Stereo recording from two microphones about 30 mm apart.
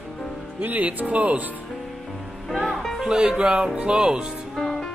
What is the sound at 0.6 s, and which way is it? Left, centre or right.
Speech, right.